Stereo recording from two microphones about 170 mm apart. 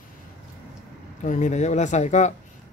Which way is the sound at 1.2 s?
45° left (ahead or behind).